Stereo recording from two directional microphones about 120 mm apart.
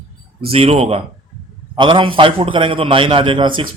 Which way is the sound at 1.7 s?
45° right (ahead or behind).